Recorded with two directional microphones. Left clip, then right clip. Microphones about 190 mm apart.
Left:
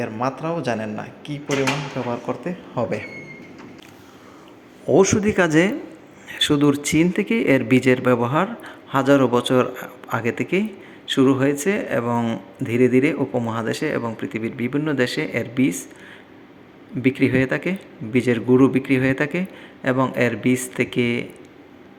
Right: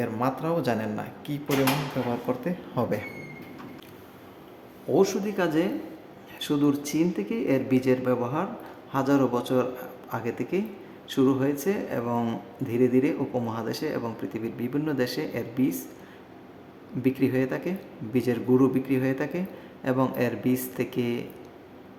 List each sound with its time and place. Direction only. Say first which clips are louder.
0.0 s speech: left 3 dB; 5° right (ahead or behind)
4.9 s a man's voice: left 7 dB; 25° left (ahead or behind)
6.2 s a sound: left 8 dB; 25° left (ahead or behind)
6.9 s a man's voice: left 8 dB; 25° left (ahead or behind)
17.0 s speech: left 6 dB; 15° left (ahead or behind)